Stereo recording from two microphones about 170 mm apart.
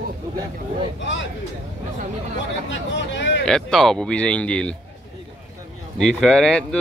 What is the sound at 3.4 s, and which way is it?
Speech, 5° left (ahead or behind).